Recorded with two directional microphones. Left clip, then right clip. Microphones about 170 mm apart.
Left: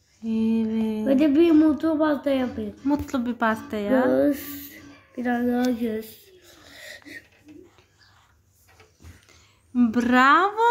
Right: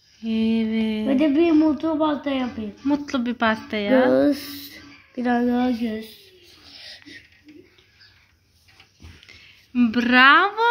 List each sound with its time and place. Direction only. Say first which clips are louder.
0.2 s mantra: right 2 dB; 10° right (ahead or behind)
1.0 s a woman's voice: left 1 dB; 20° right (ahead or behind); by 4.1 s 5° right (ahead or behind)
4.1 s speech: right 3 dB; 50° right (ahead or behind)
5.8 s speech: left 1 dB; 20° right (ahead or behind)
9.8 s speech: right 3 dB; centre (ahead or behind)